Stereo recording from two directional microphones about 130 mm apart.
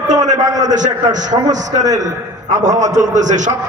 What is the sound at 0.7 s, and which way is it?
Speech, 70° right (ahead or behind).